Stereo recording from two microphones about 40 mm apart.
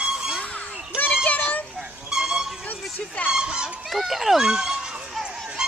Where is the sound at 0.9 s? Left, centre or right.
Left.